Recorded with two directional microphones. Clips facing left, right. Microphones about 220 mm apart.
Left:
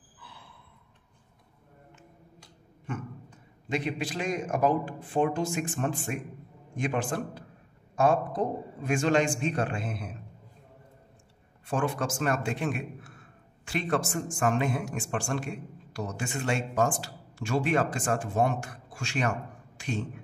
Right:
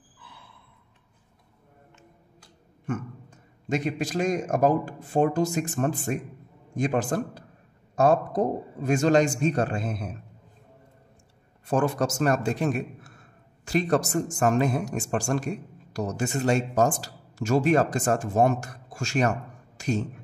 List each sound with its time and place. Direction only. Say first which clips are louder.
2.9 s a man's voice: right 5 dB; 45° right (ahead or behind)
11.6 s a man's voice: right 5 dB; 40° right (ahead or behind)